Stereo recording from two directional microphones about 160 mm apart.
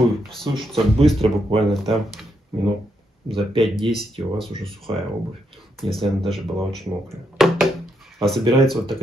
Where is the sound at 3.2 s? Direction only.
35° right (ahead or behind).